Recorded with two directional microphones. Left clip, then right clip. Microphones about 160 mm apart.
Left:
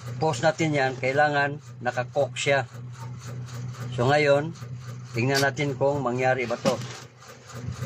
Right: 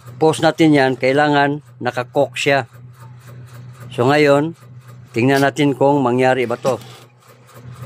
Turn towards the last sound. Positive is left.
turn(degrees=-90)